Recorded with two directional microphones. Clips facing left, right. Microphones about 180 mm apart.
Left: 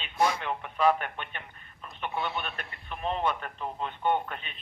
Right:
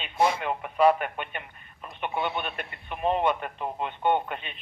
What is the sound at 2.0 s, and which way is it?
A man's voice, 20° right (ahead or behind).